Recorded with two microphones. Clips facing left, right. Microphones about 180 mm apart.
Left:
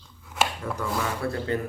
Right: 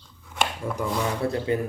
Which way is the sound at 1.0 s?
20° right (ahead or behind).